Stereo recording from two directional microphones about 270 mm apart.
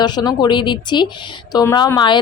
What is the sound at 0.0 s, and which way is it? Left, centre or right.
A woman's voice, centre.